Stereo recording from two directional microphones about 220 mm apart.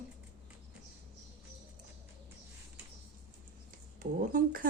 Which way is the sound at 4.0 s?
40° right (ahead or behind).